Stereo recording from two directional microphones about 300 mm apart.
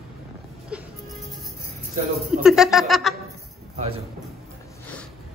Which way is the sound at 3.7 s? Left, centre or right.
Centre.